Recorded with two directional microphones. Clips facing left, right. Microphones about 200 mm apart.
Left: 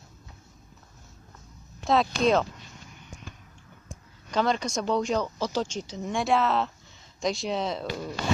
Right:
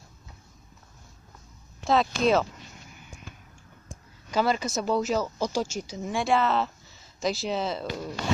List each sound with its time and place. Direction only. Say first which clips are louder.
1.9 s speech: even; centre (ahead or behind)
4.3 s speech: even; 5° right (ahead or behind)